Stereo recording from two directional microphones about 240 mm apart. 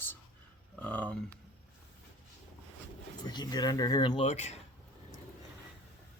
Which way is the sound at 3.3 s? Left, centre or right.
Centre.